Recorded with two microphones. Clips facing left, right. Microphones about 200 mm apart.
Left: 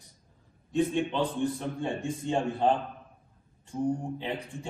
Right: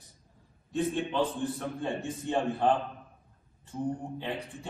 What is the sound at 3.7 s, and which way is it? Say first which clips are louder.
A man's voice: left 4 dB; 15° left (ahead or behind).